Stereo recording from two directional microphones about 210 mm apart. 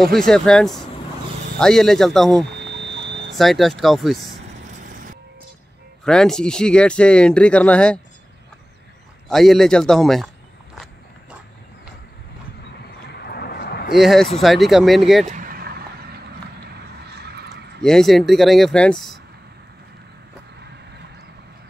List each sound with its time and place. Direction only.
0.0 s speech: centre (ahead or behind)
2.6 s a sound: 55° right (ahead or behind)
3.3 s speech: centre (ahead or behind)
6.0 s speech: 5° left (ahead or behind)
9.3 s speech: centre (ahead or behind)
13.1 s a sound: 50° left (ahead or behind)
13.9 s speech: centre (ahead or behind)
15.2 s a sound: 40° right (ahead or behind)
17.1 s neigh: 50° right (ahead or behind)
17.8 s speech: centre (ahead or behind)